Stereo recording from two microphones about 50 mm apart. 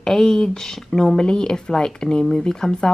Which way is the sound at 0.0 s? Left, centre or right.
Centre.